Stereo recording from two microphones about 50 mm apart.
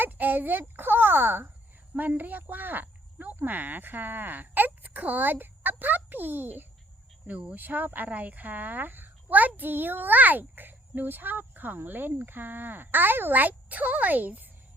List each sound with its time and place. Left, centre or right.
0.0 s a child's voice: right
7.3 s speech: right
7.5 s a child's voice: right